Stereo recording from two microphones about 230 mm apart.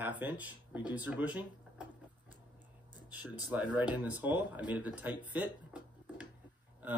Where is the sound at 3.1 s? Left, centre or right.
Centre.